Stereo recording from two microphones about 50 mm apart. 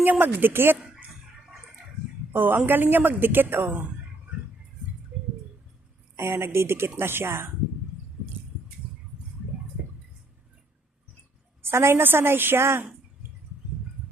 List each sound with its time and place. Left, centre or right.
0.0 s speech: right
2.3 s a woman's voice: right
6.1 s a woman's voice: right
8.8 s a sound: right
11.6 s a woman's voice: right